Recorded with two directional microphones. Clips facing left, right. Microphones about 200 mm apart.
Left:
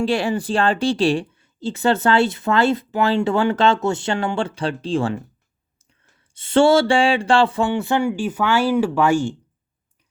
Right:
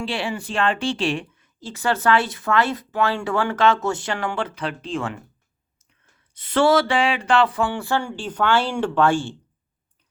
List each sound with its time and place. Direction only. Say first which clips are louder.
0.0 s speech: left 7 dB; 40° left (ahead or behind)
6.3 s speech: left 3 dB; 25° left (ahead or behind); by 9.3 s 10° left (ahead or behind)